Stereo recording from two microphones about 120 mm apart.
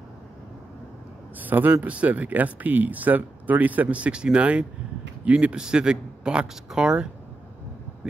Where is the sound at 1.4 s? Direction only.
15° right (ahead or behind).